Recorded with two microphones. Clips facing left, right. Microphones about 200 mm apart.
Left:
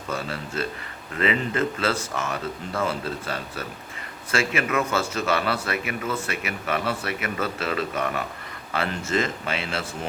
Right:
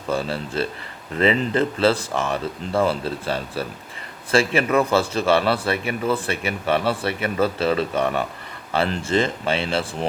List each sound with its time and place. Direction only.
0.1 s speech: 30° right (ahead or behind)